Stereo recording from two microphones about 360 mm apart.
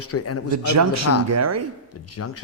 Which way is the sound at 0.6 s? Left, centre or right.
Right.